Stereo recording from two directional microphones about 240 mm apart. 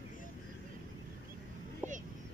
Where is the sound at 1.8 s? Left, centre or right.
Centre.